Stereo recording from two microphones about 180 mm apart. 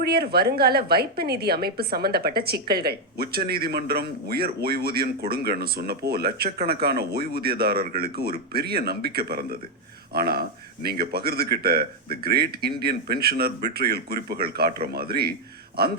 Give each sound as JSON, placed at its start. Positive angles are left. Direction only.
{"t": 0.0, "sound": "a woman's voice", "side_deg": -60}